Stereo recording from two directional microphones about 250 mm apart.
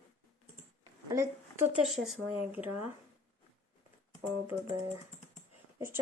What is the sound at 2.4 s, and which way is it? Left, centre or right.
Speech, centre.